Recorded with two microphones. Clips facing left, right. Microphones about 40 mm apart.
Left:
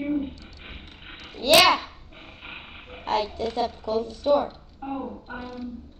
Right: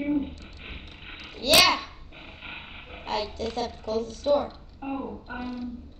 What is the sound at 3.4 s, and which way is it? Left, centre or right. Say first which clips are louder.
Speech: left 4 dB; centre.